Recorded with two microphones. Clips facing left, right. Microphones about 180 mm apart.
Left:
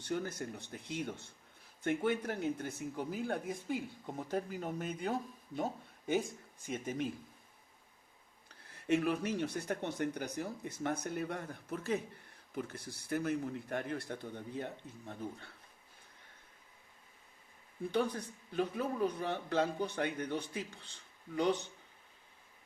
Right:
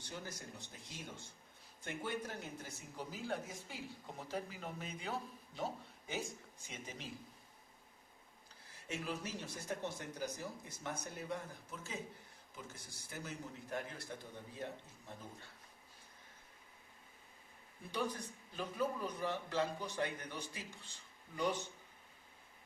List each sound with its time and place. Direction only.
0.0 s a man's voice: 60° left (ahead or behind)
6.7 s a man's voice: 55° left (ahead or behind)
8.4 s speech: 60° left (ahead or behind)
17.9 s speech: 60° left (ahead or behind)